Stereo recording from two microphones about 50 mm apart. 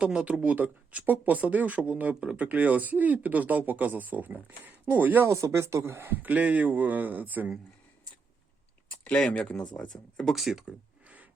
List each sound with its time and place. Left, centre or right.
0.0 s speech: right
5.2 s speech: right
6.1 s speech: right
9.3 s speech: left
10.3 s speech: centre
11.0 s a sound: right